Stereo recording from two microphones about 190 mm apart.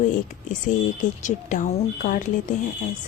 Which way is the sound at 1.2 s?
40° left (ahead or behind).